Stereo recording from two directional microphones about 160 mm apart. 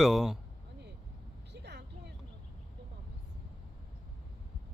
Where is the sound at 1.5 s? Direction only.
90° right.